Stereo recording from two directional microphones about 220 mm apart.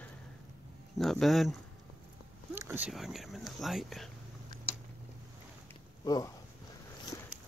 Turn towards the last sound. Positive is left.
turn(degrees=15)  # may be behind; listen again after turning